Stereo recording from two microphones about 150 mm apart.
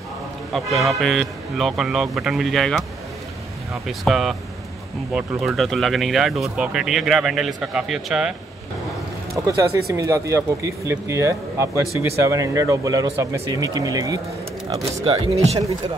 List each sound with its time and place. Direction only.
0.5 s speech: centre (ahead or behind)
3.8 s speech: centre (ahead or behind)
9.3 s speech: 20° right (ahead or behind)
15.0 s speech: 45° right (ahead or behind)